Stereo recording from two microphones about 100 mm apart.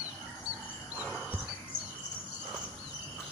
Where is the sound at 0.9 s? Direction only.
5° right (ahead or behind).